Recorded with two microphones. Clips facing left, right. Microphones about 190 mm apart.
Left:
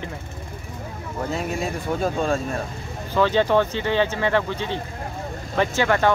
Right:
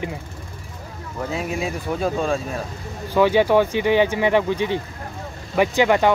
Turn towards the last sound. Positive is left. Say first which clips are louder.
# right 3 dB
turn(degrees=-15)  # may be behind; listen again after turning